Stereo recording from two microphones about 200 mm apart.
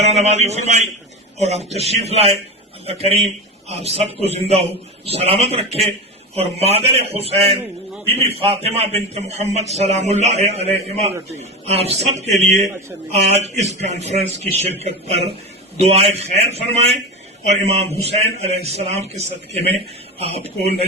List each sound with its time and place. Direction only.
0.0 s a man's voice: 35° right (ahead or behind)